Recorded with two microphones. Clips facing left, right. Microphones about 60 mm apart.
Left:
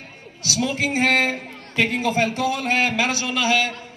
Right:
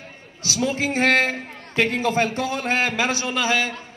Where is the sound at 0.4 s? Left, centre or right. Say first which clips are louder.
Even; right.